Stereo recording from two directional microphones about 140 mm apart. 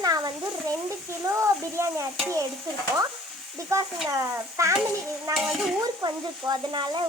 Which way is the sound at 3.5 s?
20° right (ahead or behind).